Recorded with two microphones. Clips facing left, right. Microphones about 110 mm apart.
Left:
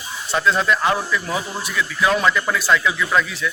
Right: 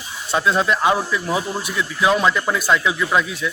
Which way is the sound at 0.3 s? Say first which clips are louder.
Even; 20° right (ahead or behind).